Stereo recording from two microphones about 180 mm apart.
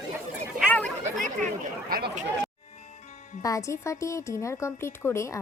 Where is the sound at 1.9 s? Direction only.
60° right (ahead or behind).